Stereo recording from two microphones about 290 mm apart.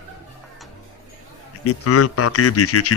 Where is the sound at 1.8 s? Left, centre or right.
Left.